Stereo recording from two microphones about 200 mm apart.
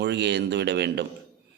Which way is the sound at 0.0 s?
60° right (ahead or behind).